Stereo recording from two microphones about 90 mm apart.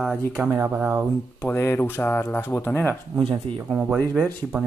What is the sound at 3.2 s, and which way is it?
Speech, 60° right (ahead or behind).